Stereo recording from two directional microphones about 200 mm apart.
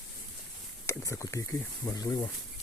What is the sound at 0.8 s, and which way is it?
Speech, 15° left (ahead or behind).